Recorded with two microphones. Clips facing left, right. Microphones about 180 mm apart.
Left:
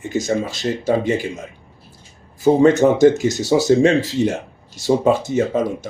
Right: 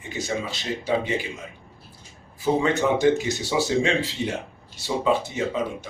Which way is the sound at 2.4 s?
45° left (ahead or behind).